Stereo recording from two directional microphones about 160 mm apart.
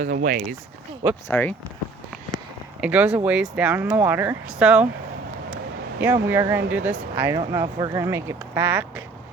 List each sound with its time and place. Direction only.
0.0 s speech: 60° right (ahead or behind)
1.3 s speech: 10° left (ahead or behind)
2.8 s speech: 10° right (ahead or behind)
6.0 s speech: 10° right (ahead or behind)